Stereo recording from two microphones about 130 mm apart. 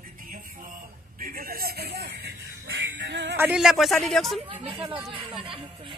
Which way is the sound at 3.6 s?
5° right (ahead or behind).